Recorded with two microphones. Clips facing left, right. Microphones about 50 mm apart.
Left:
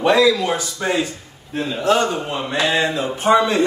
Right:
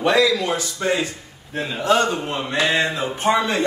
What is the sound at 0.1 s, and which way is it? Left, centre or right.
Speech, left.